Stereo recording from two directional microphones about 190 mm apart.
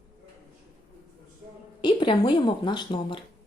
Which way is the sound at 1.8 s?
25° left (ahead or behind).